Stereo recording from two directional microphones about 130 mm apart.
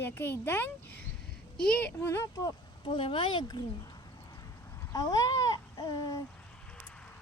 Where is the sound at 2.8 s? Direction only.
40° left (ahead or behind).